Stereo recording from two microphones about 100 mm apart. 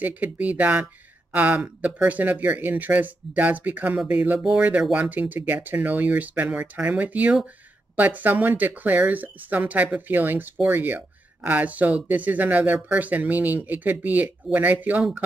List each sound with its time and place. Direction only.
0.0 s speech: 15° right (ahead or behind)